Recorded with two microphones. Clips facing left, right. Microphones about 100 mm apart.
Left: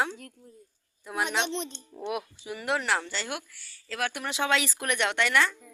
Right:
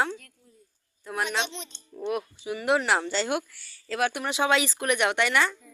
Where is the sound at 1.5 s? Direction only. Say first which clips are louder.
Left 8 dB; 60° left (ahead or behind).